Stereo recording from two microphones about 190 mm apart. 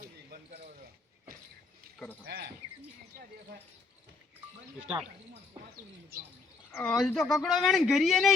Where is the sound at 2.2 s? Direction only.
55° right (ahead or behind).